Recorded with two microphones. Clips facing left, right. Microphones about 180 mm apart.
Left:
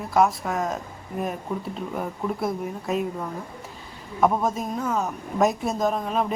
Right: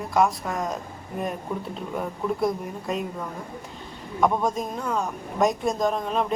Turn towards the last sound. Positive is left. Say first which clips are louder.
# even
turn(degrees=5)  # may be behind; listen again after turning